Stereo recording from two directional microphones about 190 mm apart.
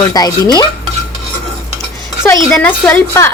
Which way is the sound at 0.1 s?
20° left (ahead or behind).